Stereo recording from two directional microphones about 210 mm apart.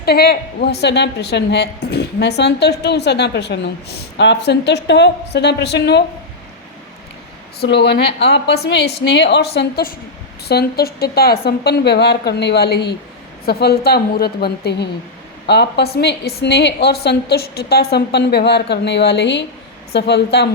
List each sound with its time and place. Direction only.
0.0 s a woman's voice: 50° left (ahead or behind)
7.6 s a woman's voice: 55° left (ahead or behind)